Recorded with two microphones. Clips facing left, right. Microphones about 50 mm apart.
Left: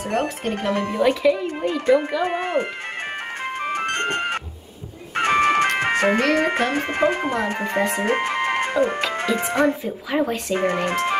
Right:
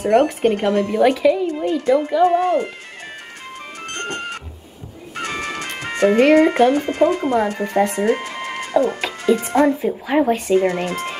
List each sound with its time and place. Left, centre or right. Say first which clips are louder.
0.4 s speech: right 7 dB; right
0.9 s speech: right 2 dB; centre
1.6 s a child's voice: right 1 dB; left
3.6 s music: left 5 dB; left
5.8 s ice cream truck: right 3 dB; left
6.3 s speech: right 7 dB; left
8.0 s music: right 1 dB; left
9.5 s speech: right 3 dB; left
9.8 s speech: right 5 dB; centre
10.5 s speech: right 4 dB; left